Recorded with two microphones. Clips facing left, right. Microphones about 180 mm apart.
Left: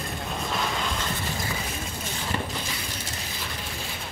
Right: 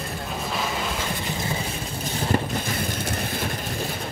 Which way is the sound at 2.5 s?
55° right (ahead or behind).